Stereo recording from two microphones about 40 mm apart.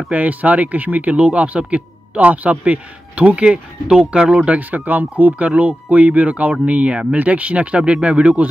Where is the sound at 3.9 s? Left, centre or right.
Right.